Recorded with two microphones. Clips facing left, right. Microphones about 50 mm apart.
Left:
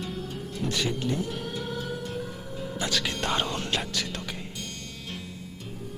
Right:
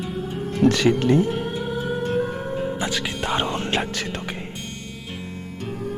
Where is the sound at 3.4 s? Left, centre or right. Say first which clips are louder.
Right 6 dB; right.